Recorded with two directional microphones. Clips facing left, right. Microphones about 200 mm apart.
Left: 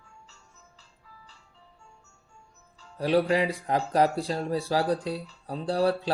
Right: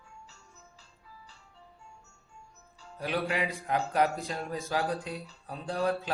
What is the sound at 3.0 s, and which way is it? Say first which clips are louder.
Speech: left 8 dB; 35° left (ahead or behind).